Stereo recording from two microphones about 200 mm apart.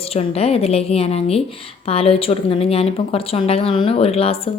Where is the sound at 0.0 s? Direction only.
30° left (ahead or behind).